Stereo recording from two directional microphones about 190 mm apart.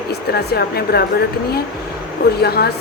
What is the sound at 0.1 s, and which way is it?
Speech, 55° left (ahead or behind).